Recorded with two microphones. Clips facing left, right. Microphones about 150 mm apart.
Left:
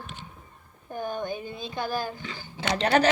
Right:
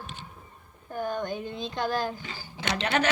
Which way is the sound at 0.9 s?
15° left (ahead or behind).